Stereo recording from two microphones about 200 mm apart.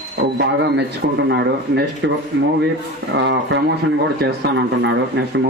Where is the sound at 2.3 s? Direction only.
70° right (ahead or behind).